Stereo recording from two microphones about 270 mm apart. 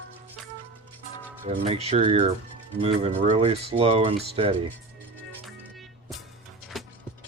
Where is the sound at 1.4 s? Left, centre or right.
Right.